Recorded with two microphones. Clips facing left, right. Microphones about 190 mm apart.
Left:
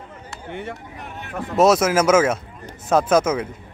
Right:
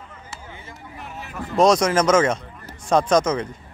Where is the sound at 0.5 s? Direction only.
70° left (ahead or behind).